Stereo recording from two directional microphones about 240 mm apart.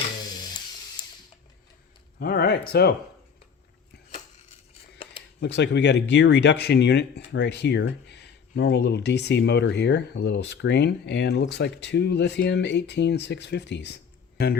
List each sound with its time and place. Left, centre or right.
1.0 s mechanisms: centre
2.1 s speech: left
5.4 s speech: left